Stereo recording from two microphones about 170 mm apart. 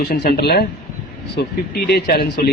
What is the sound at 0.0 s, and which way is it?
A man's voice, 70° left (ahead or behind).